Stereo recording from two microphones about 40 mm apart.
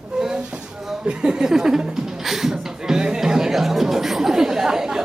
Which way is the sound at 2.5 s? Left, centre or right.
Centre.